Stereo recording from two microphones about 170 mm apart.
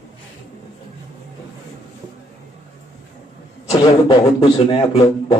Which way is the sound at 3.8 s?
30° left (ahead or behind).